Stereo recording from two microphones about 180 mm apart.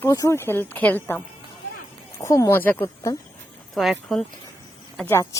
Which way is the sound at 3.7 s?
Centre (ahead or behind).